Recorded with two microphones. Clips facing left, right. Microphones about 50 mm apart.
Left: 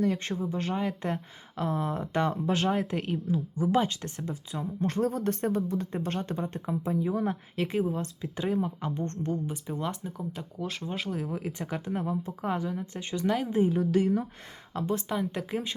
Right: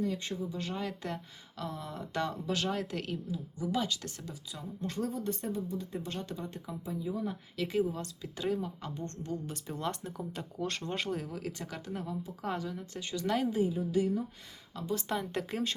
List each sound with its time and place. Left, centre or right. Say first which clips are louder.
0.0 s speech: left 6 dB; left
0.8 s speech: left 6 dB; left
3.3 s speech: left 8 dB; left
7.5 s speech: even; left
9.5 s speech: left 3 dB; centre
11.3 s speech: left 6 dB; left
13.2 s speech: left 2 dB; centre
13.7 s a woman's voice: left 5 dB; left
14.7 s speech: left 6 dB; left
15.1 s speech: left 4 dB; centre